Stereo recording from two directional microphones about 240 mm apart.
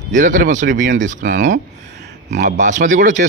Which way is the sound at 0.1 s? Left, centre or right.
Right.